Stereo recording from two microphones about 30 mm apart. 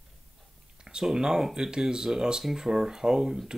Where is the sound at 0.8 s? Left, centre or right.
Centre.